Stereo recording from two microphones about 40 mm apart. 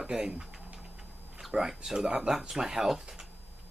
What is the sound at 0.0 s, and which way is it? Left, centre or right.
Speech, centre.